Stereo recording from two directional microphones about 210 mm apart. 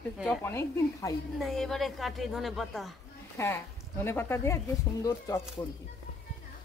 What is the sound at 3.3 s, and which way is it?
Speech, 10° left (ahead or behind).